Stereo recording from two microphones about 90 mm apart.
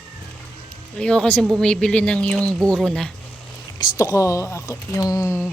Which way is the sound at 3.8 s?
40° left (ahead or behind).